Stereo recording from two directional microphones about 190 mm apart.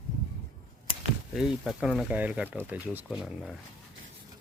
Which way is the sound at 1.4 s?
5° right (ahead or behind).